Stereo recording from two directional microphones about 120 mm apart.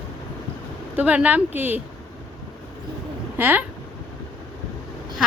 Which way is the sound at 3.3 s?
15° right (ahead or behind).